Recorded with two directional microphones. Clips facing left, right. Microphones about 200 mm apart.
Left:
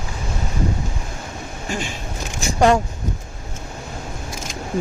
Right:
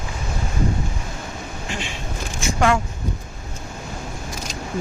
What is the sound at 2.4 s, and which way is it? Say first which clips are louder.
Speech: left 4 dB; 35° left (ahead or behind).